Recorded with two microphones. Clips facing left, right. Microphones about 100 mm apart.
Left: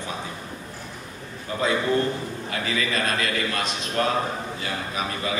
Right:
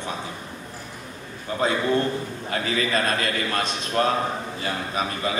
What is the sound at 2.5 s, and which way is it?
Speech, 35° right (ahead or behind).